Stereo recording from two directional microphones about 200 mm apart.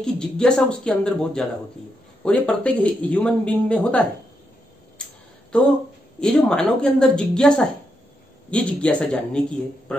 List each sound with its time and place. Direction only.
0.0 s speech: 5° left (ahead or behind)
6.2 s speech: 5° left (ahead or behind)